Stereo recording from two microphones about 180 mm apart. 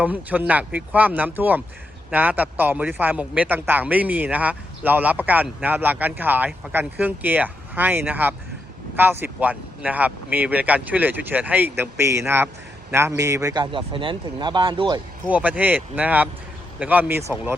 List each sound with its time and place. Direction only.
0.0 s a man's voice: 10° right (ahead or behind); by 15.0 s 25° right (ahead or behind)
15.3 s a man's voice: 10° right (ahead or behind)